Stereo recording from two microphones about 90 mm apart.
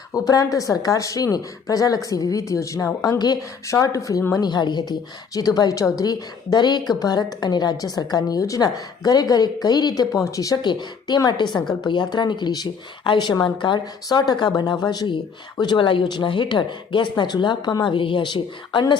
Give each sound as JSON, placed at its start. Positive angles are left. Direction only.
{"t": 0.1, "sound": "speech", "side_deg": 40}
{"t": 4.4, "sound": "a woman's voice", "side_deg": 50}
{"t": 10.6, "sound": "a woman's voice", "side_deg": 55}
{"t": 17.9, "sound": "speech", "side_deg": 70}